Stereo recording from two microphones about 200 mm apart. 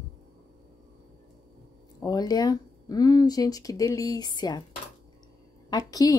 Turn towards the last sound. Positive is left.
turn(degrees=20)  # may be behind; listen again after turning